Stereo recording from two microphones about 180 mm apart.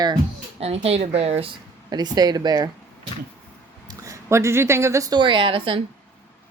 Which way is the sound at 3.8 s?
15° right (ahead or behind).